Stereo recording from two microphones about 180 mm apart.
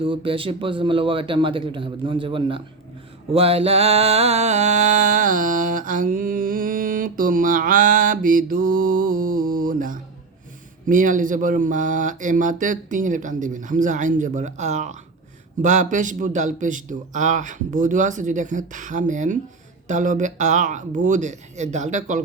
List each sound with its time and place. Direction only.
0.0 s speech: 30° right (ahead or behind)
3.3 s mantra: 35° right (ahead or behind)